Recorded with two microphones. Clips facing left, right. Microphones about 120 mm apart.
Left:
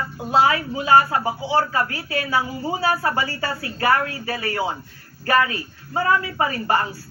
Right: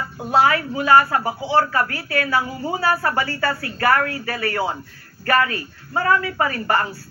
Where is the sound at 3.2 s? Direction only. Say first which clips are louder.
Right 3 dB; 40° right (ahead or behind).